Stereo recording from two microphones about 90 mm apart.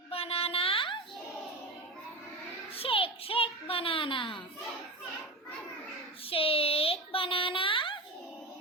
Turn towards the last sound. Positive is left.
turn(degrees=70)  # may be behind; listen again after turning